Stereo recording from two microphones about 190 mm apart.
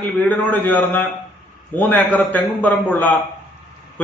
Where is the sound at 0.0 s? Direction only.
10° left (ahead or behind).